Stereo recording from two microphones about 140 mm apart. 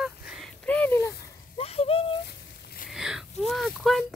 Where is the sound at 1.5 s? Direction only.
45° left (ahead or behind).